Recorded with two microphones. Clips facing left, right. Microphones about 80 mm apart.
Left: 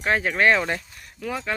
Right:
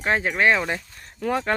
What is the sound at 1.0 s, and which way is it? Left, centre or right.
Speech, right.